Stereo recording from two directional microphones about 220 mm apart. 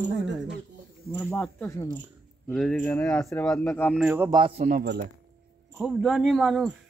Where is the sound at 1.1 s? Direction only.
10° left (ahead or behind).